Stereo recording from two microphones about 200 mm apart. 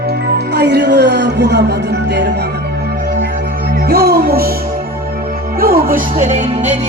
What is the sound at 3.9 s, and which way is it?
Music, 50° right (ahead or behind).